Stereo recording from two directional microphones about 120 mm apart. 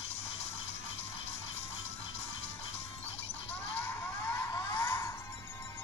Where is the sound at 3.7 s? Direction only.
20° left (ahead or behind).